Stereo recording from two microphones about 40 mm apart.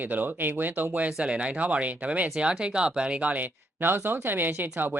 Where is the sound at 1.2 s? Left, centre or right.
Right.